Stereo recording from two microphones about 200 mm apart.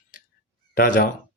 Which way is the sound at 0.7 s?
45° left (ahead or behind).